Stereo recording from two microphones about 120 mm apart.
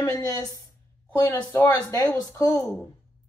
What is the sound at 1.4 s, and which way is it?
Speech, 15° left (ahead or behind).